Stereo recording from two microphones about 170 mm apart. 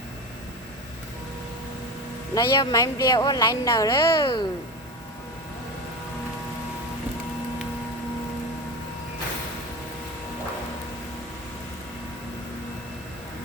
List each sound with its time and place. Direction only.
2.3 s speech: 20° left (ahead or behind)